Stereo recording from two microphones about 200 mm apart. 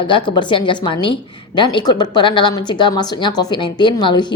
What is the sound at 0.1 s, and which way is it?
A woman's voice, 25° left (ahead or behind).